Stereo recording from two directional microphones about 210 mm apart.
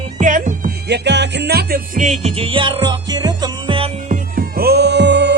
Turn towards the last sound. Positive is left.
turn(degrees=-55)  # may be behind; listen again after turning